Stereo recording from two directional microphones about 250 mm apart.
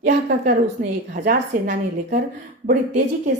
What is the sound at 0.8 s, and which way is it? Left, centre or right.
A woman's voice, right.